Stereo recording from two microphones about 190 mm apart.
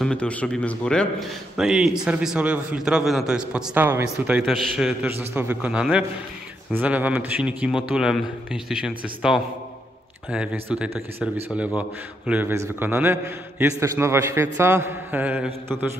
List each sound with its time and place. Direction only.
0.0 s a man's voice: 5° left (ahead or behind)
10.3 s a man's voice: 5° right (ahead or behind)